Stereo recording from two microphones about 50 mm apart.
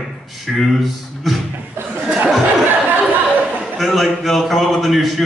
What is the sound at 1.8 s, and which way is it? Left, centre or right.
Chuckle, right.